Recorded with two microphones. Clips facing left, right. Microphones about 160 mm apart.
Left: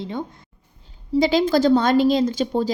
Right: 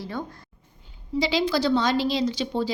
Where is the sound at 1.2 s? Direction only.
45° left (ahead or behind).